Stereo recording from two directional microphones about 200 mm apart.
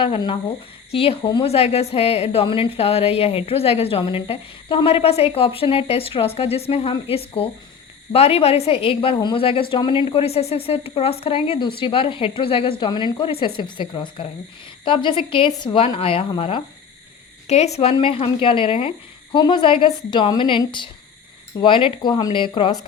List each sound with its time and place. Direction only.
0.0 s speech: 25° left (ahead or behind)